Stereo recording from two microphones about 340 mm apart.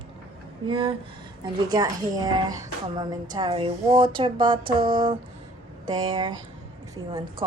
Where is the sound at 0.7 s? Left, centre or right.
Centre.